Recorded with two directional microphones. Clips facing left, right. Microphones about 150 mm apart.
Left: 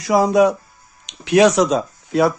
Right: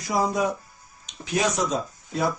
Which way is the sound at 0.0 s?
85° left.